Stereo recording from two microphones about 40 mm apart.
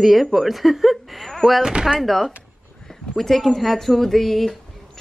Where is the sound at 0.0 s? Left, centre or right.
Centre.